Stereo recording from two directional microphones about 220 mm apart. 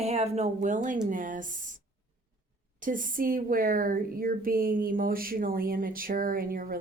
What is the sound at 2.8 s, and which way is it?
Speech, 35° right (ahead or behind).